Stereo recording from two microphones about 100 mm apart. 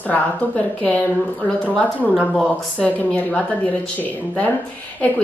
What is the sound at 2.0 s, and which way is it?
Speech, 10° right (ahead or behind).